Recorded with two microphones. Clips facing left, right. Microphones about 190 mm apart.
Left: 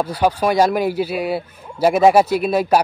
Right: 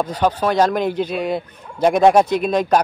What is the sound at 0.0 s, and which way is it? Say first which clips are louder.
A man's voice: left 1 dB; 10° left (ahead or behind).